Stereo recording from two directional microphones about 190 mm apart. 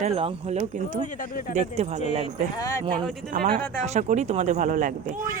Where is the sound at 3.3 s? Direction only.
45° right (ahead or behind).